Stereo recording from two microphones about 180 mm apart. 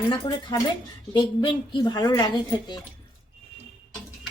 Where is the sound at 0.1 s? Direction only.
25° left (ahead or behind).